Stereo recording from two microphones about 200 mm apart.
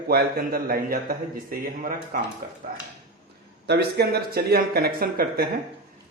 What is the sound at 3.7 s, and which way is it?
A man's voice, 55° right (ahead or behind).